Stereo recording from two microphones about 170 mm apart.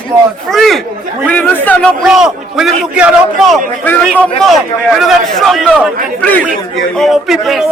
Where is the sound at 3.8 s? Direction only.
10° left (ahead or behind).